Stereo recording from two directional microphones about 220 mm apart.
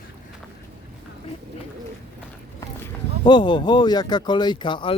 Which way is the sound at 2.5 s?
15° left (ahead or behind).